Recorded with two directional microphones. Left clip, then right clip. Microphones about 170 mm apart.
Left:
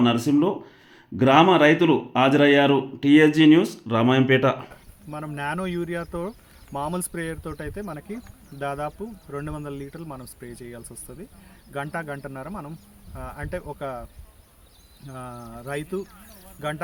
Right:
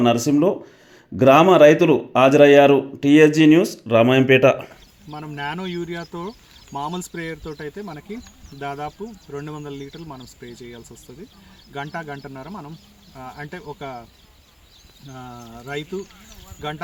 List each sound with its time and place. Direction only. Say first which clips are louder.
0.0 s speech: right 4 dB; 5° right (ahead or behind)
5.1 s speech: even; 15° left (ahead or behind)
11.7 s speech: even; 15° left (ahead or behind)
13.7 s speech: left 1 dB; 5° left (ahead or behind)
15.1 s speech: even; 5° left (ahead or behind)